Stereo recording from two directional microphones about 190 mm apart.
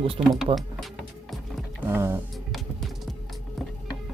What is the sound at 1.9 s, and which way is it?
Speech, 10° right (ahead or behind).